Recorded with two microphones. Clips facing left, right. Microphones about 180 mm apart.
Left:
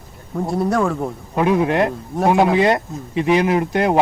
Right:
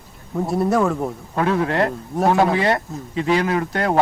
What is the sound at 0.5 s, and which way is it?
Speech, centre (ahead or behind).